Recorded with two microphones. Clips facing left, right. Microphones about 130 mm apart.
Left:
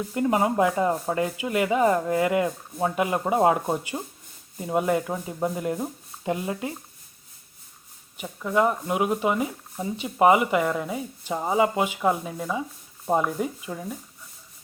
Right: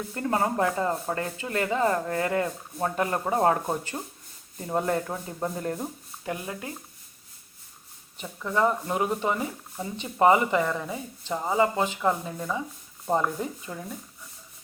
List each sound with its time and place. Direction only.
0.1 s speech: 15° left (ahead or behind)
6.2 s speech: 20° left (ahead or behind)
8.2 s speech: 10° left (ahead or behind)